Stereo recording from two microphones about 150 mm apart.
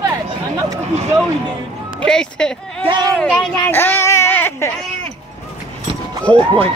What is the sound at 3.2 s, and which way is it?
Speech, centre (ahead or behind).